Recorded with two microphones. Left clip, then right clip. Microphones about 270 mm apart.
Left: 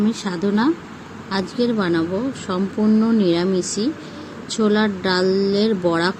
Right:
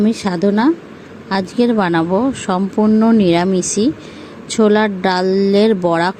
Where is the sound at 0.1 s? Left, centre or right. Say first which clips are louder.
Right 6 dB; centre.